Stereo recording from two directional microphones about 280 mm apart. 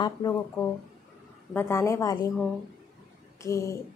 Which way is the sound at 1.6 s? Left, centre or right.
Centre.